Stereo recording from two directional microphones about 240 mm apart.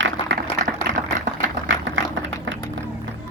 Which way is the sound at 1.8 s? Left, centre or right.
Right.